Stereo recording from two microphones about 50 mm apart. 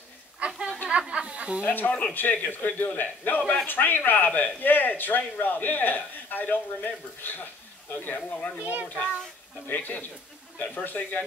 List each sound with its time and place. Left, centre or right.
0.5 s a sound: centre
1.6 s speech: left
1.9 s a child's voice: left
8.3 s a child's voice: left